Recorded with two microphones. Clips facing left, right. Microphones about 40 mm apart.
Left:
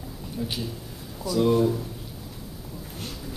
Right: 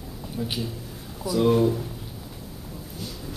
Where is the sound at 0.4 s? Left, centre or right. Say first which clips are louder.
Right 1 dB; centre.